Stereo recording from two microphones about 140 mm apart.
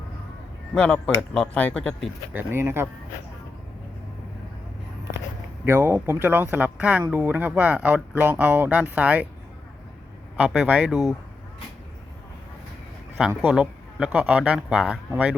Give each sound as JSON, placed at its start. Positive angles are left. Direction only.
{"t": 0.7, "sound": "speech", "side_deg": 5}
{"t": 2.3, "sound": "speech", "side_deg": -15}
{"t": 5.6, "sound": "speech", "side_deg": -15}
{"t": 10.3, "sound": "speech", "side_deg": -5}
{"t": 13.4, "sound": "speech", "side_deg": -5}